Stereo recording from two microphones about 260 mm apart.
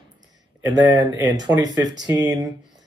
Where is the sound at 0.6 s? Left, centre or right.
Centre.